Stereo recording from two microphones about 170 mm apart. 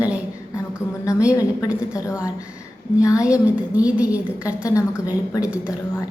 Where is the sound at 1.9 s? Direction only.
20° left (ahead or behind).